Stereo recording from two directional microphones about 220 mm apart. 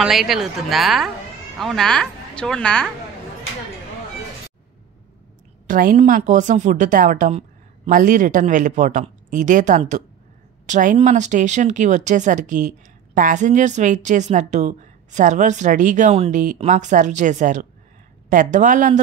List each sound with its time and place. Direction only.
0.0 s a woman's voice: centre (ahead or behind)
5.7 s speech: 35° right (ahead or behind)